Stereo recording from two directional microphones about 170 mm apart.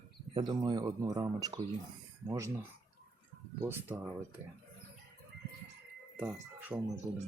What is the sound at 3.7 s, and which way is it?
Speech, 15° right (ahead or behind).